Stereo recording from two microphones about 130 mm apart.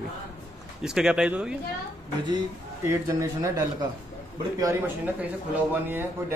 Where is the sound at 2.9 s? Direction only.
25° right (ahead or behind).